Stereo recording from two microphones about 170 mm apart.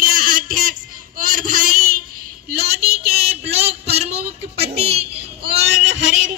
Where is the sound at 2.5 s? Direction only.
70° right (ahead or behind).